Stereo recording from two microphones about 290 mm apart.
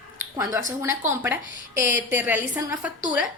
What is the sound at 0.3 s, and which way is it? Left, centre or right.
A woman's voice, centre.